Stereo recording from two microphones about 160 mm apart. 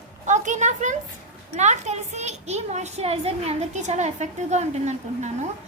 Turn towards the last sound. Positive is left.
turn(degrees=-45)  # may be behind; listen again after turning